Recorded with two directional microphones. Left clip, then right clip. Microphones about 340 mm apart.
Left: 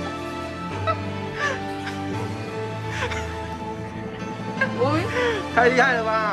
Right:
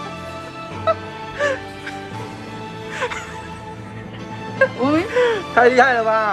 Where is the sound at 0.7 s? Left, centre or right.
Centre.